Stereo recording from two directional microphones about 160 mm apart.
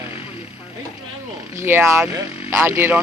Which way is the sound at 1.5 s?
15° right (ahead or behind).